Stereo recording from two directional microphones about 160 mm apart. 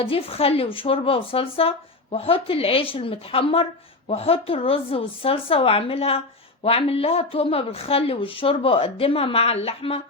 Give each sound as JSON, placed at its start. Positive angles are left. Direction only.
{"t": 0.0, "sound": "speech", "side_deg": 35}